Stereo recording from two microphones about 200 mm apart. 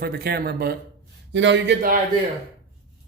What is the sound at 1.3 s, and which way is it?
Speech, 65° right (ahead or behind).